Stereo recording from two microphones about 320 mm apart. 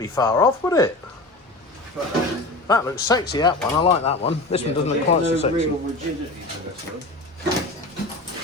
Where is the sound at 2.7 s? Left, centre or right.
Centre.